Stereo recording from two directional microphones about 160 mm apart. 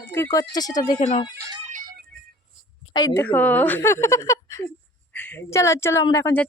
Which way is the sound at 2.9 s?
25° left (ahead or behind).